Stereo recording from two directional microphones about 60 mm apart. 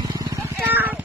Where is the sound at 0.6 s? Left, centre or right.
Right.